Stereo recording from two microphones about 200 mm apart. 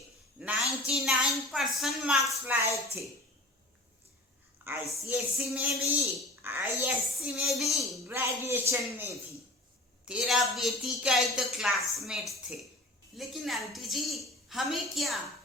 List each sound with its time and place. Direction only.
0.4 s a sound: 5° right (ahead or behind)
0.9 s speech: centre (ahead or behind)
4.7 s a man's voice: 10° right (ahead or behind)
6.4 s a child's voice: 10° right (ahead or behind)
8.0 s a man's voice: 10° right (ahead or behind)